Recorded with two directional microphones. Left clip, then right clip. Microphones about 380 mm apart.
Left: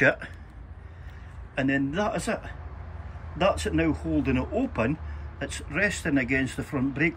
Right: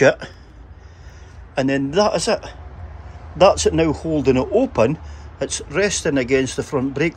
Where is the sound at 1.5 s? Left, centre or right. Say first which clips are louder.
Right 8 dB; centre.